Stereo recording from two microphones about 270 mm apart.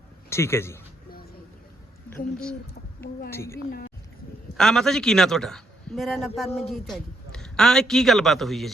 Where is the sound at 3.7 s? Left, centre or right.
Left.